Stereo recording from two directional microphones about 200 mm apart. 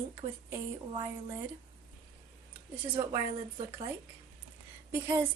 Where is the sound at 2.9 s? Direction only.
25° right (ahead or behind).